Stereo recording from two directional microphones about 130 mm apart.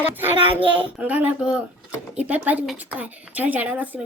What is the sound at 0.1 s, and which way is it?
Speech, 15° right (ahead or behind).